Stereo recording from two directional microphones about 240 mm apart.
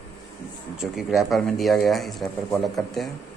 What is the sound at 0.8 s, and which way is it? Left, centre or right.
Speech, centre.